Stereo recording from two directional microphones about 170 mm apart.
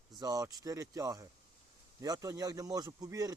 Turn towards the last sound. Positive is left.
turn(degrees=-20)  # may be behind; listen again after turning